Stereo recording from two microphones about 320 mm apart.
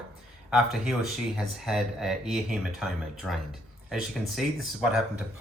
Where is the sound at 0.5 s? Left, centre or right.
Centre.